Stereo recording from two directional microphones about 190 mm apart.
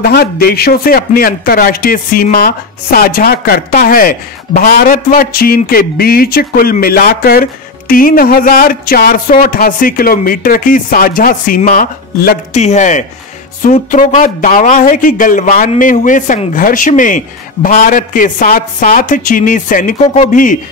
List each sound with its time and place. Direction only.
0.0 s a man's voice: 55° left (ahead or behind)
12.5 s a man's voice: 40° left (ahead or behind)